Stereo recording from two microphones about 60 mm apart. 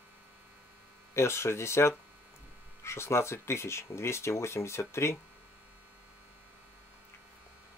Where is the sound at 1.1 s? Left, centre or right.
Left.